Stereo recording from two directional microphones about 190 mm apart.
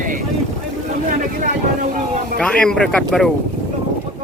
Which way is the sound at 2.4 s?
5° left (ahead or behind).